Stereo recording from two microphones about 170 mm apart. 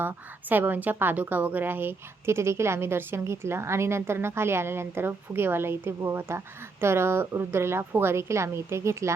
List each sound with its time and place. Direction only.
0.0 s a woman's voice: 10° right (ahead or behind)